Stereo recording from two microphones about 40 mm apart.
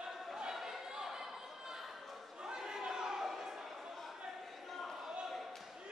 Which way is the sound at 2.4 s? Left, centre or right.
Centre.